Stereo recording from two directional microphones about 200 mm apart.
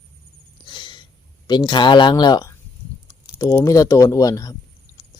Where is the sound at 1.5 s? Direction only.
20° left (ahead or behind).